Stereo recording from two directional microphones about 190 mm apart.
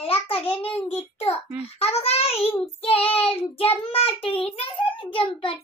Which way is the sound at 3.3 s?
30° left (ahead or behind).